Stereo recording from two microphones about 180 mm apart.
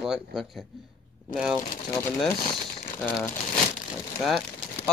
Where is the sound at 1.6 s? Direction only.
45° left (ahead or behind).